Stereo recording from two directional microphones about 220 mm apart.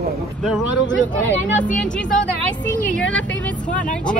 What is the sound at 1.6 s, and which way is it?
Speech, 5° left (ahead or behind).